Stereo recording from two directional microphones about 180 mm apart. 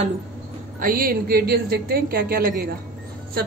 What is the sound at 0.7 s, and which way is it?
Speech, 50° right (ahead or behind).